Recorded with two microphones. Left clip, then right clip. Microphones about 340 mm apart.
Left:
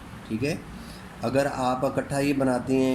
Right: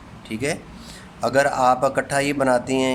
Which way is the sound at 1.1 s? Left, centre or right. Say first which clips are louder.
Right 7 dB; right.